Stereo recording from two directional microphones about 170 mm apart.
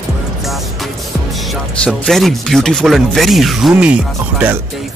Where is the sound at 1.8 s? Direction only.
Centre (ahead or behind).